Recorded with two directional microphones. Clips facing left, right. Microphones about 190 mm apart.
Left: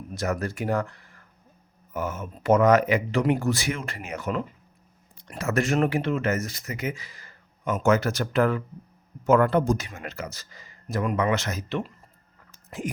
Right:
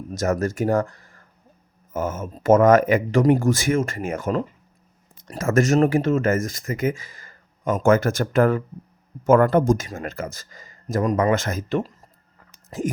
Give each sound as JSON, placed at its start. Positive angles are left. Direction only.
{"t": 0.1, "sound": "speech", "side_deg": -45}